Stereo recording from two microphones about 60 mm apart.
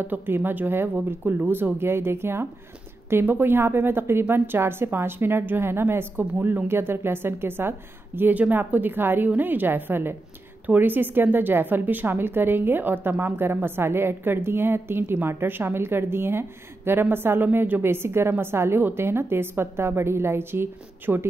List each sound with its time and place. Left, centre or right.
0.0 s a woman's voice: right
0.9 s speech: right
1.5 s a woman's voice: right